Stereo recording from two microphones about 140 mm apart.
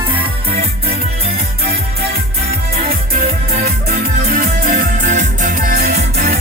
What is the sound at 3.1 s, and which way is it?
Music, 90° right.